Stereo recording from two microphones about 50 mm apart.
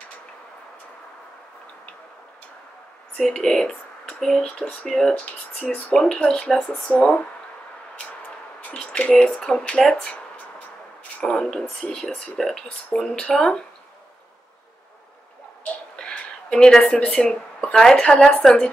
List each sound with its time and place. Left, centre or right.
3.2 s speech: centre
8.7 s a sound: left
9.2 s speech: centre
11.2 s speech: centre
16.0 s speech: centre